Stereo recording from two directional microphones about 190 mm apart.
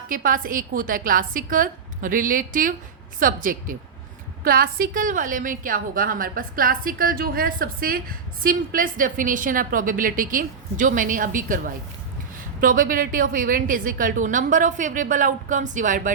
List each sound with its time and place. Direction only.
0.1 s a woman's voice: 45° right (ahead or behind)